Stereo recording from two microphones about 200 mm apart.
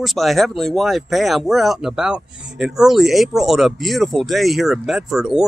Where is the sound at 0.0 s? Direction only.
Centre (ahead or behind).